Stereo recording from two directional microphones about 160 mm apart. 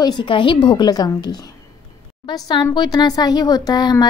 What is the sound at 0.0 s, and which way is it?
A woman's voice, 30° left (ahead or behind).